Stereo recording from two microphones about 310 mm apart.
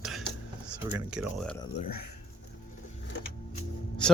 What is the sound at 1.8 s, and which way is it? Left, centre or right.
Speech, left.